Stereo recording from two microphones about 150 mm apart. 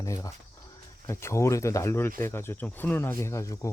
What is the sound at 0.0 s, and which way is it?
Speech, 20° left (ahead or behind).